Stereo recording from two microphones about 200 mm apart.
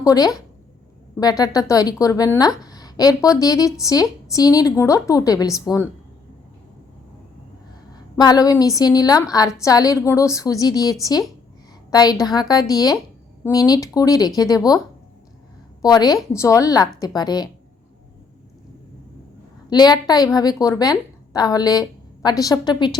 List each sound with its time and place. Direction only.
0.0 s speech: 20° left (ahead or behind)
8.1 s a woman's voice: 20° left (ahead or behind)
15.8 s a woman's voice: 20° left (ahead or behind)
19.7 s a woman's voice: 20° left (ahead or behind)